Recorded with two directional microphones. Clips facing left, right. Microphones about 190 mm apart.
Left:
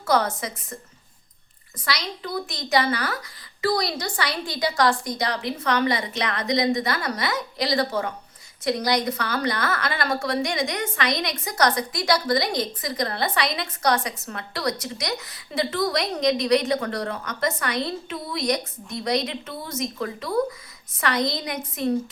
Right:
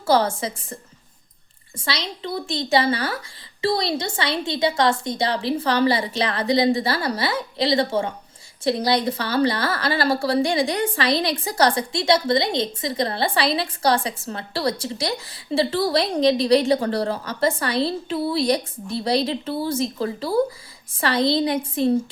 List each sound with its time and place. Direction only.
0.0 s a woman's voice: 30° right (ahead or behind)